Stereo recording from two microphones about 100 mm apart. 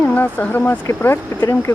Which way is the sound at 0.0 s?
15° left (ahead or behind).